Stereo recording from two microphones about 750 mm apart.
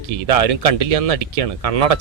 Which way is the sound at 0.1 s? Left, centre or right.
Right.